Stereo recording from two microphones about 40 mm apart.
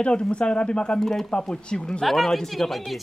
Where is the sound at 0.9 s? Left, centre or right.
Centre.